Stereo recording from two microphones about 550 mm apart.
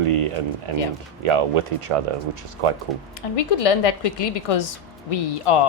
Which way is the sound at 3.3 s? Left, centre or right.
Left.